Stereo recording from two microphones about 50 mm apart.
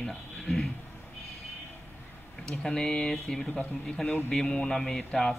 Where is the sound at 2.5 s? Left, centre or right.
Centre.